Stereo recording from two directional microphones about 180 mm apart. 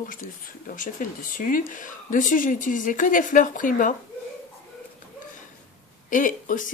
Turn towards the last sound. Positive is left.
turn(degrees=45)  # may be behind; listen again after turning